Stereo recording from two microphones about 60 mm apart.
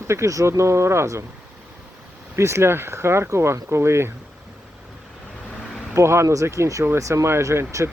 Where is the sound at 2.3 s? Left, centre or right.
Right.